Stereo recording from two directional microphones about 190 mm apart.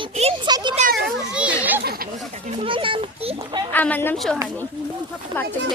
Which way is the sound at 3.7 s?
10° left (ahead or behind).